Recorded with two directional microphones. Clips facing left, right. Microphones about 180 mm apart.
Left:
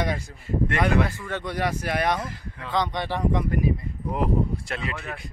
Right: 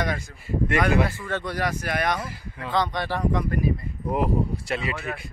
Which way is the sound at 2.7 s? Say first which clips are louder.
Right 1 dB; 20° left (ahead or behind).